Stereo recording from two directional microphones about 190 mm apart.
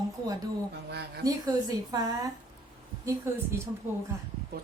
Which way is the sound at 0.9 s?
60° right (ahead or behind).